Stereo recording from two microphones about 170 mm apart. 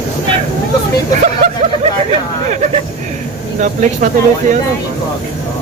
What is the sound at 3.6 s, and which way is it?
Speech, 50° right (ahead or behind).